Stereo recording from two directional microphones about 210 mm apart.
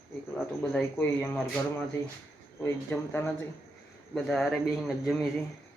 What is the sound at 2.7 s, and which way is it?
Speech, 10° left (ahead or behind).